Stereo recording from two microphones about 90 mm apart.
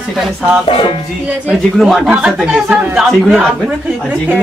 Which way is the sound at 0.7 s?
70° left (ahead or behind).